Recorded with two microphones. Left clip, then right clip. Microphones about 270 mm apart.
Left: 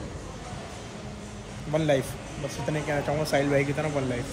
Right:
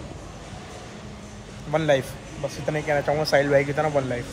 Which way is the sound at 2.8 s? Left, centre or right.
Right.